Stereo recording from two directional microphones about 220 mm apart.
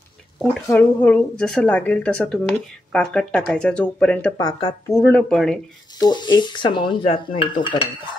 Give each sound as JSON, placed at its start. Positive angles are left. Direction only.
{"t": 0.4, "sound": "speech", "side_deg": 5}
{"t": 4.4, "sound": "speech", "side_deg": 20}
{"t": 4.9, "sound": "speech", "side_deg": 10}
{"t": 5.9, "sound": "speech", "side_deg": 20}